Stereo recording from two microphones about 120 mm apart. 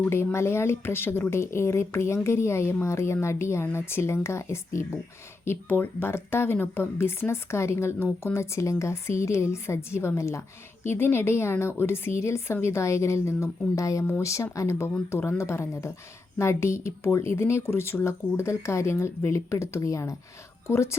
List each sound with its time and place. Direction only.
0.0 s speech: 20° left (ahead or behind)